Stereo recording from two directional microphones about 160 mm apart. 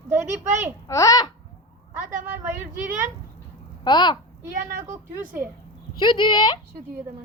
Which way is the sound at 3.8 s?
25° left (ahead or behind).